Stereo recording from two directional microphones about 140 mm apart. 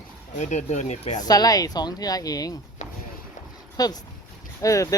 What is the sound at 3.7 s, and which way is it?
Speech, 25° left (ahead or behind).